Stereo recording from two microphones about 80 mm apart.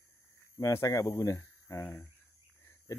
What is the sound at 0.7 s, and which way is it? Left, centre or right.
Speech, left.